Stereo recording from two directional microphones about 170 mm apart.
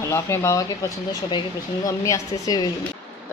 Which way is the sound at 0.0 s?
15° left (ahead or behind).